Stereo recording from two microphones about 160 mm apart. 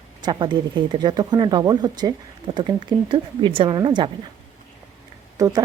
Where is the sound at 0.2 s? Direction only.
30° right (ahead or behind).